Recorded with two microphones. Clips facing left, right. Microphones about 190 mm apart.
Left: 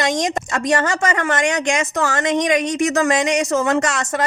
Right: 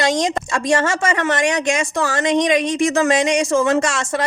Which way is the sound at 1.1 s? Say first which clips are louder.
Right 1 dB; 45° left (ahead or behind).